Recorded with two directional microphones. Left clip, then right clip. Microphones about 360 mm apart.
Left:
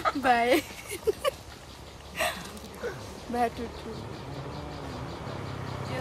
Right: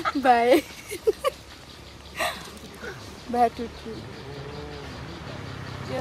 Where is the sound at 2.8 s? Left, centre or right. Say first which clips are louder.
Left 2 dB; left.